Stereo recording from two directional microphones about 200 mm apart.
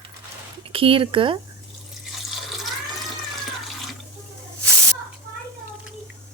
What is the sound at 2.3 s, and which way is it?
Water, centre (ahead or behind).